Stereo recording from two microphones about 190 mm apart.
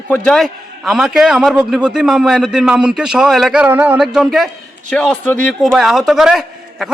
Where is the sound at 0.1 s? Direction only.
Centre (ahead or behind).